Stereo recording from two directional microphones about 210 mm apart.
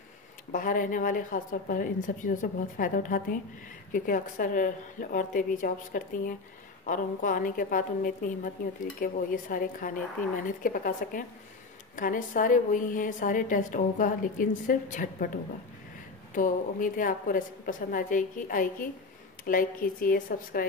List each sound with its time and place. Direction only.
0.5 s a woman's voice: 40° left (ahead or behind)
16.3 s a woman's voice: 40° left (ahead or behind)